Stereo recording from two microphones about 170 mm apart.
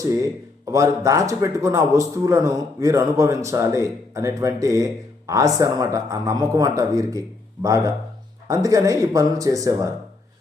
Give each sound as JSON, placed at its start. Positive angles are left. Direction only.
{"t": 0.0, "sound": "a man's voice", "side_deg": -20}